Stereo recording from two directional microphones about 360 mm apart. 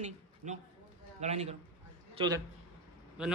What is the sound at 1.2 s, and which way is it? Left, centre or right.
Speech, centre.